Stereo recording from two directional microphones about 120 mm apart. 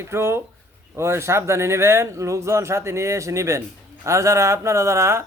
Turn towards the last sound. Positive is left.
turn(degrees=-25)  # may be behind; listen again after turning